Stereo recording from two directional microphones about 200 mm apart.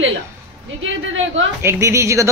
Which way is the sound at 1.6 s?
15° right (ahead or behind).